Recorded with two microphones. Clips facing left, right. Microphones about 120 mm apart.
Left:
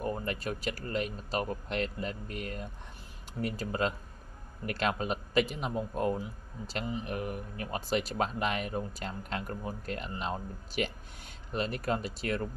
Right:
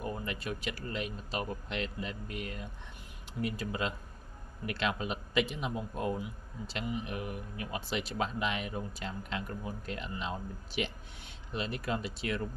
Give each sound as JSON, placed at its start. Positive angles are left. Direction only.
{"t": 0.0, "sound": "a man's voice", "side_deg": 40}